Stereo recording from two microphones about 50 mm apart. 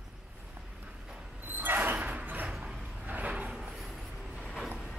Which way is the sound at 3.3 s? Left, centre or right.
Centre.